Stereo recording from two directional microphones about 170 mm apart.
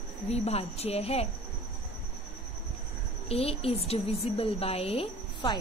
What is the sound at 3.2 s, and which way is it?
A woman's voice, 35° left (ahead or behind).